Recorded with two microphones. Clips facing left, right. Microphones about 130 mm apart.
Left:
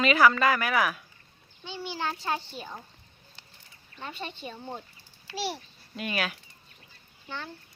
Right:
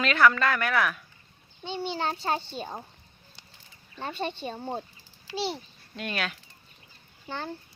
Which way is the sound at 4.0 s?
30° right (ahead or behind).